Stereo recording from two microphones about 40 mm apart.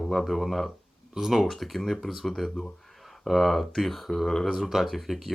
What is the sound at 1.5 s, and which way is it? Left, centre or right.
Speech, centre.